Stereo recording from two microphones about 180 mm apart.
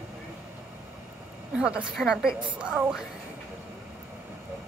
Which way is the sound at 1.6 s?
5° right (ahead or behind).